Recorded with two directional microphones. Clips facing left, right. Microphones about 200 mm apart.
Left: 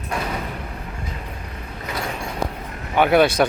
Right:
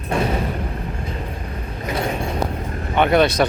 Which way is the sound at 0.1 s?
30° right (ahead or behind).